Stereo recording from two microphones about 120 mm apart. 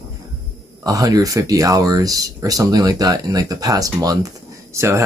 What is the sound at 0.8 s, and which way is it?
Speech, 30° right (ahead or behind).